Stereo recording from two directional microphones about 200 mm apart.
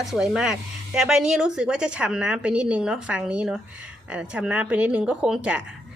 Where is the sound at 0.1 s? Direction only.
5° right (ahead or behind).